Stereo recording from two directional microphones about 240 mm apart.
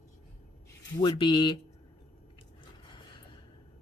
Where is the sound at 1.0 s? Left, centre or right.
Centre.